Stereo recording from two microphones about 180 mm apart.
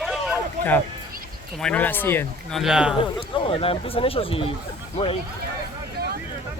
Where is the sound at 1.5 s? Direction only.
5° left (ahead or behind).